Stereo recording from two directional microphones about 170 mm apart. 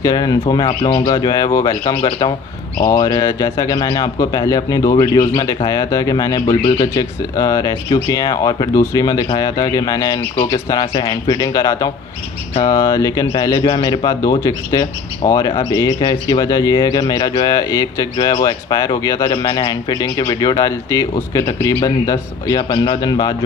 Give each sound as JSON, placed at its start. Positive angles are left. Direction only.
{"t": 0.0, "sound": "a man's voice", "side_deg": 20}